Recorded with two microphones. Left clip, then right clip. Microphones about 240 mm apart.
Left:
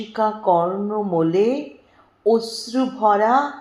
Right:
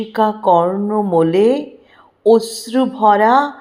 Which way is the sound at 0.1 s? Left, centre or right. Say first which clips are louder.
Right 5 dB; right.